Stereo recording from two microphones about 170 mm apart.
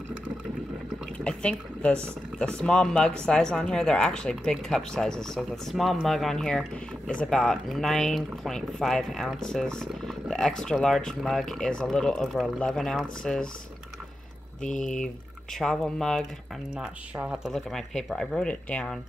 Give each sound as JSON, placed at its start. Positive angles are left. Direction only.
{"t": 1.1, "sound": "a sound", "side_deg": 5}
{"t": 2.3, "sound": "speech", "side_deg": 5}
{"t": 14.6, "sound": "speech", "side_deg": 45}
{"t": 15.6, "sound": "speech", "side_deg": 5}